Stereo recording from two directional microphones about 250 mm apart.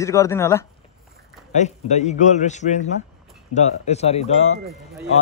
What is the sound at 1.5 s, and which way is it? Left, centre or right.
Speech, left.